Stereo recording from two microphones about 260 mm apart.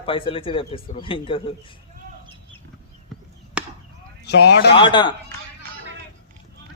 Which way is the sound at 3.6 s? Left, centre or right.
Centre.